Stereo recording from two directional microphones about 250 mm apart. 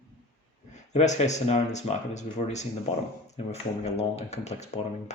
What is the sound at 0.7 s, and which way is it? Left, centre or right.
Speech, left.